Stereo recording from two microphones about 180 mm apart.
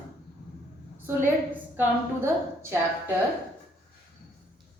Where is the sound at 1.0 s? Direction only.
15° right (ahead or behind).